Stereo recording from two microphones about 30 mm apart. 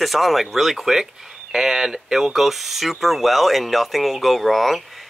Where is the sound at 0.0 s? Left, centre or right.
Centre.